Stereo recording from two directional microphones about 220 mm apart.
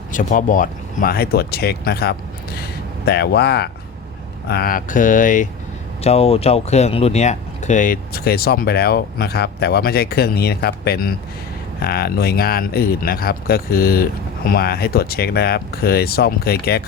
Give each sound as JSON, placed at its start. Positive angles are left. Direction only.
{"t": 0.1, "sound": "speech", "side_deg": 35}